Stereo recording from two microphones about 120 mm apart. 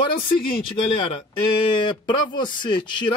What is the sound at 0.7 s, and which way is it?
Speech, 50° left (ahead or behind).